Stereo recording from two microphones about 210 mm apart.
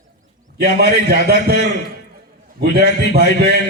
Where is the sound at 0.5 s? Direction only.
50° right (ahead or behind).